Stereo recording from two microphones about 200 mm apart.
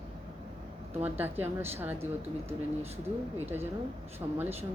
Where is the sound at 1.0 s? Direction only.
10° right (ahead or behind).